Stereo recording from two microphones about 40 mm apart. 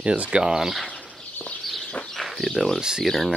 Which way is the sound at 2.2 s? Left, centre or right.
Centre.